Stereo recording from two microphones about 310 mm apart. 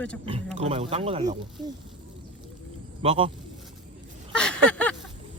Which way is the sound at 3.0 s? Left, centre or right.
Centre.